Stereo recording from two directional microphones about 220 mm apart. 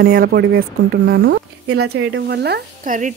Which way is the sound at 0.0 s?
45° right (ahead or behind).